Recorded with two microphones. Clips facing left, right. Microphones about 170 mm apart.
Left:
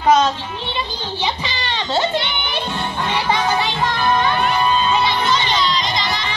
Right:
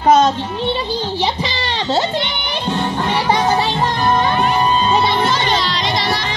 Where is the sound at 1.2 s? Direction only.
35° right (ahead or behind).